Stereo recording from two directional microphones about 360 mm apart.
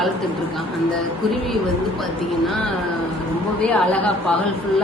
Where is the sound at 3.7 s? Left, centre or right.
Centre.